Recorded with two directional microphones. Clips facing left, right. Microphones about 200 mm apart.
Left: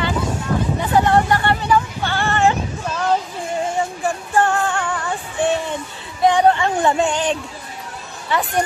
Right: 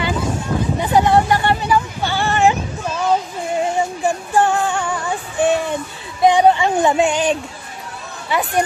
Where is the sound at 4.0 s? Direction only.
15° right (ahead or behind).